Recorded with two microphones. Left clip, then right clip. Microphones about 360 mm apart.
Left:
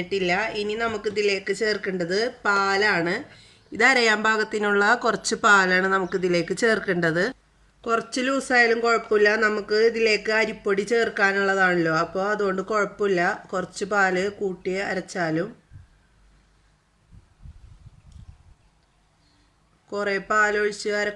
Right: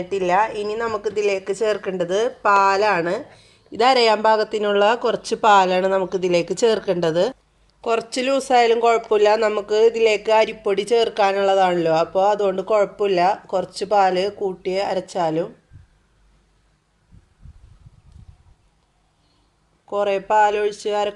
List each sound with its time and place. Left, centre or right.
0.5 s a woman's voice: centre
8.9 s a man's voice: right
9.4 s a woman's voice: centre
9.6 s a man's voice: right
10.0 s a woman's voice: centre
13.1 s a man's voice: right
13.5 s a woman's voice: centre
19.9 s a woman's voice: centre